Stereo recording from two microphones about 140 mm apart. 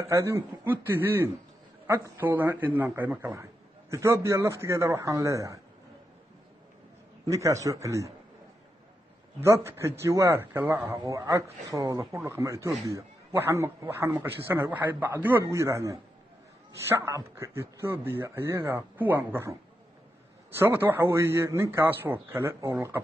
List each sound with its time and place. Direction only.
0.0 s a man's voice: 20° right (ahead or behind)
7.2 s speech: 20° right (ahead or behind)
9.4 s a man's voice: 20° right (ahead or behind)
20.5 s a man's voice: 15° right (ahead or behind)